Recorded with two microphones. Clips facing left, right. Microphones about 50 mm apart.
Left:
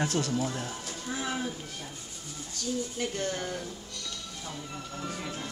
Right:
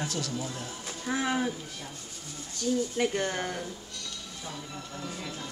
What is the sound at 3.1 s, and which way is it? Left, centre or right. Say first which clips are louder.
Speech: right 2 dB; centre.